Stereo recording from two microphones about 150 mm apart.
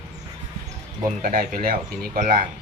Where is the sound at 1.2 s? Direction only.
75° right (ahead or behind).